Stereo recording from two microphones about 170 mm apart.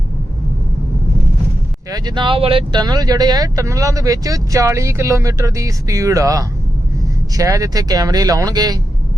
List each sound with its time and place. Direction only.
1.9 s speech: 25° right (ahead or behind)